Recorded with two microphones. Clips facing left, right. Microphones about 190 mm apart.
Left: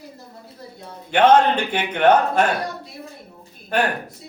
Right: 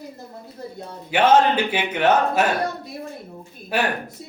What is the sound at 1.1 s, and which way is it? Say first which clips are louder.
Speech: left 2 dB; 5° right (ahead or behind).